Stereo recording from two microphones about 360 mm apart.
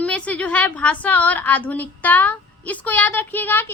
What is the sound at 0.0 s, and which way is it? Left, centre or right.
A woman's voice, centre.